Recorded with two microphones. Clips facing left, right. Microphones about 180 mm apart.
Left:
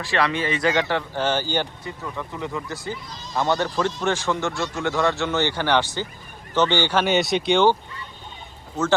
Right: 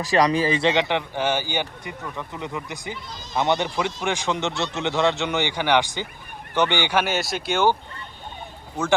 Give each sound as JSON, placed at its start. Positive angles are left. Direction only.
{"t": 0.0, "sound": "speech", "side_deg": -40}